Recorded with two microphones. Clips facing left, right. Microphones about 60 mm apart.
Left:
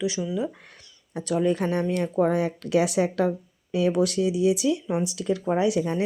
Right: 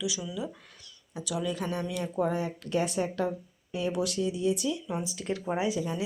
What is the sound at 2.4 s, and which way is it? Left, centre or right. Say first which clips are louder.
Speech: left 7 dB; left.